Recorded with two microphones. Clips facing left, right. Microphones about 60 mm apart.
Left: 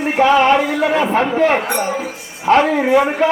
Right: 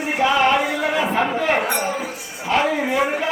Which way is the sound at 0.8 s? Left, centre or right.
Left.